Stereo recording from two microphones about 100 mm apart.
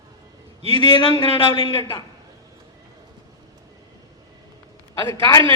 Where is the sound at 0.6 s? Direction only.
70° right (ahead or behind).